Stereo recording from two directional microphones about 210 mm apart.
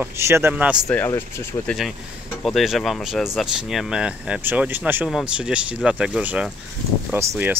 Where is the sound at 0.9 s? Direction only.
10° left (ahead or behind).